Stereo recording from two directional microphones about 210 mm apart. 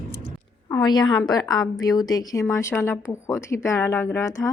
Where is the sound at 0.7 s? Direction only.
20° left (ahead or behind).